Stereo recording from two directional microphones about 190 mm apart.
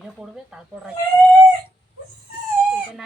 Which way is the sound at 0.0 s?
5° right (ahead or behind).